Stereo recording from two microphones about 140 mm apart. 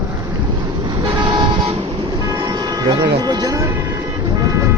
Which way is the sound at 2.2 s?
25° right (ahead or behind).